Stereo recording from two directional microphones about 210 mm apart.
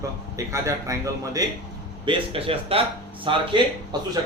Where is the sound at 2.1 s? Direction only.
25° right (ahead or behind).